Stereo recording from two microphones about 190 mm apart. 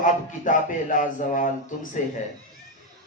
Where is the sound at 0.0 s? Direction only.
45° left (ahead or behind).